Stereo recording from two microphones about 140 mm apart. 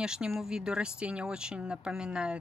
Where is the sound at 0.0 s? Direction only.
5° right (ahead or behind).